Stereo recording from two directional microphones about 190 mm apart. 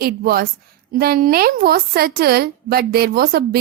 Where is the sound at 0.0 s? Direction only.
55° right (ahead or behind).